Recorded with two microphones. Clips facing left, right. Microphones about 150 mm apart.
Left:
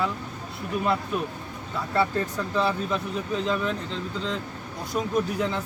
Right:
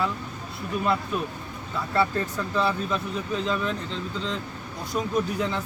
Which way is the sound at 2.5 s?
20° left (ahead or behind).